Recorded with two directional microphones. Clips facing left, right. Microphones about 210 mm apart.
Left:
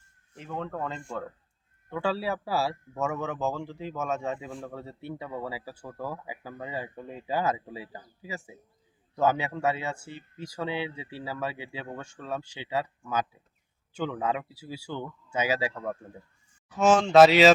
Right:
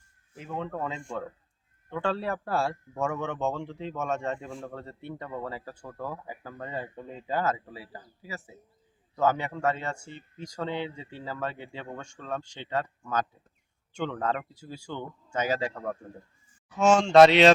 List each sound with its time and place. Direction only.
0.3 s speech: centre (ahead or behind); by 8.4 s 20° left (ahead or behind)
9.1 s speech: 10° left (ahead or behind)